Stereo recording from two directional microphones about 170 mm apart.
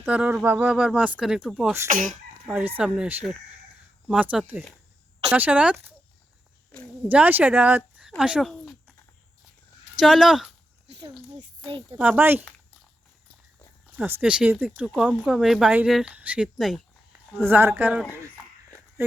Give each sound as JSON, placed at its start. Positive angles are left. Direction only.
{"t": 0.0, "sound": "speech", "side_deg": -10}
{"t": 1.9, "sound": "speech", "side_deg": -50}
{"t": 2.5, "sound": "speech", "side_deg": -10}
{"t": 7.1, "sound": "speech", "side_deg": -10}
{"t": 8.2, "sound": "a sound", "side_deg": -5}
{"t": 10.0, "sound": "speech", "side_deg": 0}
{"t": 11.9, "sound": "speech", "side_deg": -10}
{"t": 13.9, "sound": "speech", "side_deg": -10}